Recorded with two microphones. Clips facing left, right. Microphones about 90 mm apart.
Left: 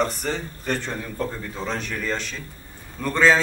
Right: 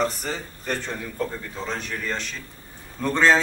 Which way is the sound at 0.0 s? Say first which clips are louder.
Left 1 dB; centre (ahead or behind).